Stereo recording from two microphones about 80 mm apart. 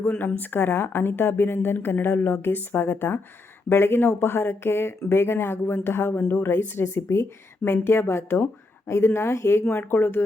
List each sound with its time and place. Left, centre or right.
0.1 s speech: left